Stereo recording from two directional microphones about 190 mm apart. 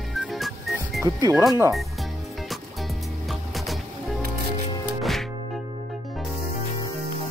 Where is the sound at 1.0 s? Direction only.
15° right (ahead or behind).